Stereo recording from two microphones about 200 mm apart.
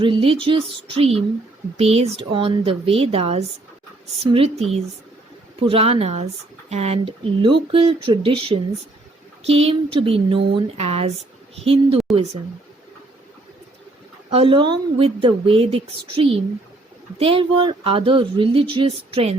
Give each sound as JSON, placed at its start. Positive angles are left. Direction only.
{"t": 0.0, "sound": "speech", "side_deg": -25}
{"t": 14.3, "sound": "speech", "side_deg": -25}